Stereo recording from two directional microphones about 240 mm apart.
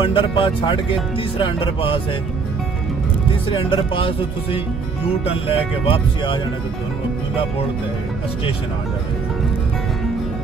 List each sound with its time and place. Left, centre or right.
0.0 s speech: left
3.4 s speech: left